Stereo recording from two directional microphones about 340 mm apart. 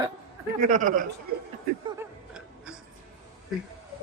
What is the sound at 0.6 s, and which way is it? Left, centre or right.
Speech, right.